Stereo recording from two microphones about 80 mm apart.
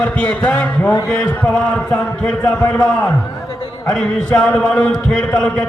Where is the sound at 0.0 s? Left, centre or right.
Centre.